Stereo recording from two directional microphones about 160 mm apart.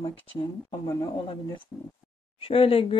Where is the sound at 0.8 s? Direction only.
20° left (ahead or behind).